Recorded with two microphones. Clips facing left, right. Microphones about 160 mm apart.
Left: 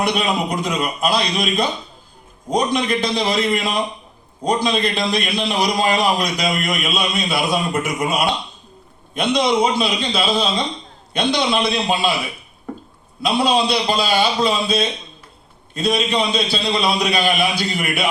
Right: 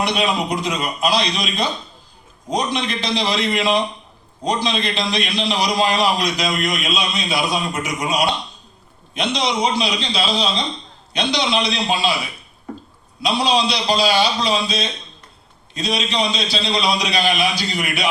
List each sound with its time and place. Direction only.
0.0 s a man's voice: 55° left (ahead or behind)
13.4 s a man's voice: 55° left (ahead or behind)